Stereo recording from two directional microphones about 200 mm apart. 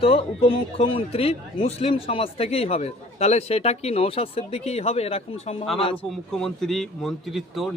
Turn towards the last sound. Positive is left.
turn(degrees=0)  # may be behind; listen again after turning